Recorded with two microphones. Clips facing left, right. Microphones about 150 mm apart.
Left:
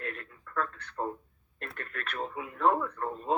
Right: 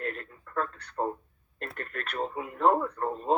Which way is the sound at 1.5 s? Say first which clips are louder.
Right 3 dB; 35° right (ahead or behind).